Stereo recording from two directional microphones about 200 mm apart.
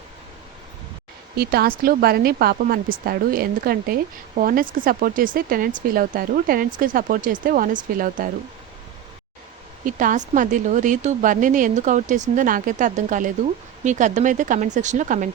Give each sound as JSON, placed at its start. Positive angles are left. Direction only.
{"t": 1.4, "sound": "speech", "side_deg": -50}
{"t": 9.8, "sound": "speech", "side_deg": -40}